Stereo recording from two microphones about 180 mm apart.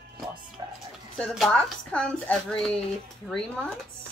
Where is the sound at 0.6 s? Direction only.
25° right (ahead or behind).